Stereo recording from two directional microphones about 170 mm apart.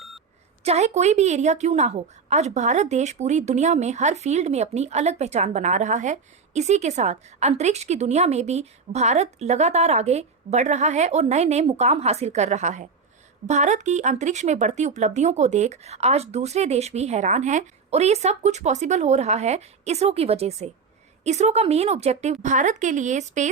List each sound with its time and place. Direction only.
0.6 s a woman's voice: 40° right (ahead or behind)